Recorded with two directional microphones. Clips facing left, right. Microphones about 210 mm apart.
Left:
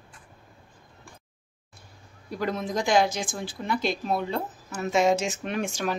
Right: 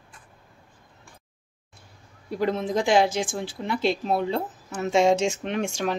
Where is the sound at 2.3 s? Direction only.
25° right (ahead or behind).